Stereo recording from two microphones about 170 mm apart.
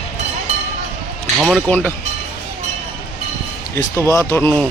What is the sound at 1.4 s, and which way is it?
Speech, centre (ahead or behind).